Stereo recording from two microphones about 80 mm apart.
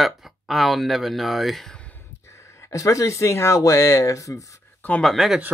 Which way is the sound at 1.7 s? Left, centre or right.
Centre.